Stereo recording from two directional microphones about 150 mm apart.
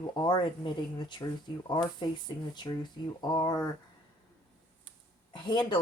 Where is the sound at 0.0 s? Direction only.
30° left (ahead or behind).